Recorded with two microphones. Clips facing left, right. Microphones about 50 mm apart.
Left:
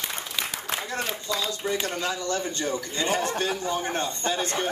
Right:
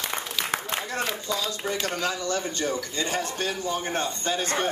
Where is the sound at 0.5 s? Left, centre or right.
Right.